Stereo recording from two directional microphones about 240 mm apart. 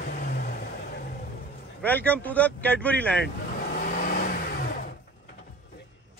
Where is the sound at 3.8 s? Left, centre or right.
Left.